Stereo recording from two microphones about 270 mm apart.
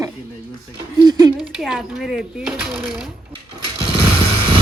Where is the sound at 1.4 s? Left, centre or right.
Centre.